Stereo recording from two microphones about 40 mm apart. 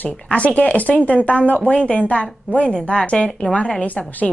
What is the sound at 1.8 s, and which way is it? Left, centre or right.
Speech, left.